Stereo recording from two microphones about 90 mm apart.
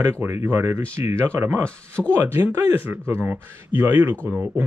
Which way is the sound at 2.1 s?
25° right (ahead or behind).